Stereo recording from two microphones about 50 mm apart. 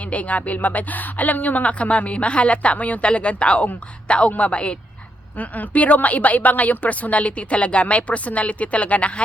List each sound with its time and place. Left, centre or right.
0.0 s a woman's voice: left